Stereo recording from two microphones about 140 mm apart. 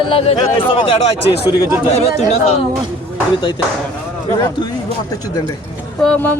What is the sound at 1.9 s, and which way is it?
Speech, 50° left (ahead or behind).